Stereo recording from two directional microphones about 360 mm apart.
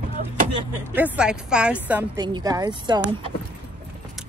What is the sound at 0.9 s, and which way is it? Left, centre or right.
Speech, centre.